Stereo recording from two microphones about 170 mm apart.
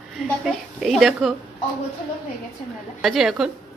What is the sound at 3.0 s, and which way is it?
Speech, centre (ahead or behind).